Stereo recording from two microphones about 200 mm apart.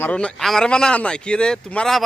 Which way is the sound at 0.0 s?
5° left (ahead or behind).